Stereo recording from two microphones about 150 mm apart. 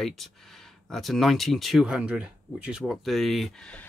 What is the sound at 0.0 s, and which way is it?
Speech, centre (ahead or behind).